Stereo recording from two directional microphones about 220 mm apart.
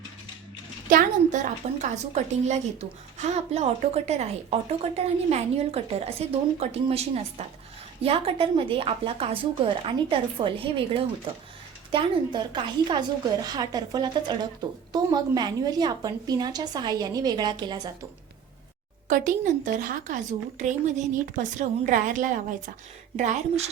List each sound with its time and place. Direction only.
0.9 s a woman's voice: 35° right (ahead or behind); by 17.9 s 20° right (ahead or behind)
19.0 s a woman's voice: 35° right (ahead or behind)